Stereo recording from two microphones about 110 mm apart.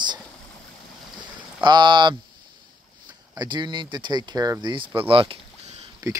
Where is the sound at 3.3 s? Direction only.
40° right (ahead or behind).